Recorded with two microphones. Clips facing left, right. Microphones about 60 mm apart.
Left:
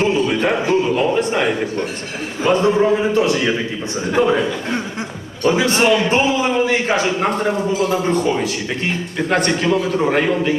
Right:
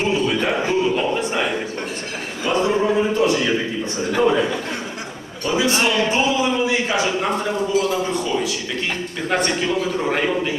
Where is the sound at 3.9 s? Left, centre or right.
Left.